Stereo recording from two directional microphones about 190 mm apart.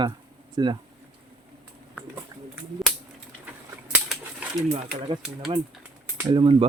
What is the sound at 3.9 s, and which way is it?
Bird, 10° right (ahead or behind).